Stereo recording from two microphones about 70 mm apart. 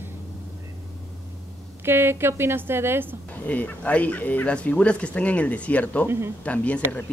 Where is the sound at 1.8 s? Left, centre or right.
Right.